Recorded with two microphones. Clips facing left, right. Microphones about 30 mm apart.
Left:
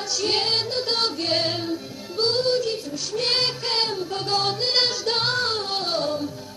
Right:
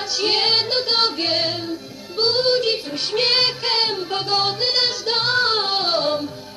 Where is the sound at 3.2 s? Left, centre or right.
Right.